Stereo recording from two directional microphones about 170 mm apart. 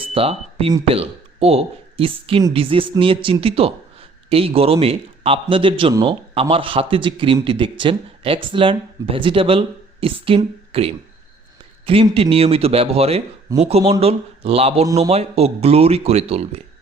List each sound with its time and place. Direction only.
0.1 s speech: 35° right (ahead or behind)